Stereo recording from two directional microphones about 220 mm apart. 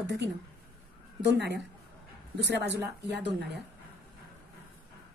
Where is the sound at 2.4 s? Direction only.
50° right (ahead or behind).